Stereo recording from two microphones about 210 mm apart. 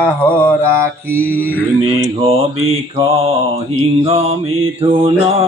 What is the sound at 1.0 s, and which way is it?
Mantra, 10° right (ahead or behind).